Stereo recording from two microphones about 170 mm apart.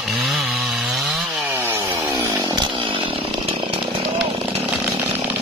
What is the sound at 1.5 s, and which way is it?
Chainsaw, 15° right (ahead or behind).